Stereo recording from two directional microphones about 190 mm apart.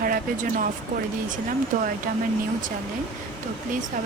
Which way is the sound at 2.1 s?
50° right (ahead or behind).